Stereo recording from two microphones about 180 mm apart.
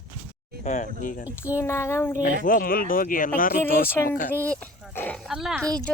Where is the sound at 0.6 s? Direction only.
40° left (ahead or behind).